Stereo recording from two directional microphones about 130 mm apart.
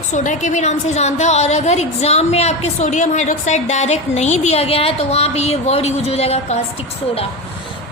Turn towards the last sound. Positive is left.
turn(degrees=50)  # may be behind; listen again after turning